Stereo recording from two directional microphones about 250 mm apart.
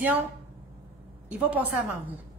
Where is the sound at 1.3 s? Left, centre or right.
Centre.